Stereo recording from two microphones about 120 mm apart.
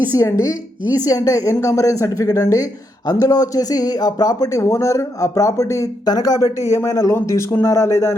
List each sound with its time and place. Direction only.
0.2 s speech: 25° left (ahead or behind)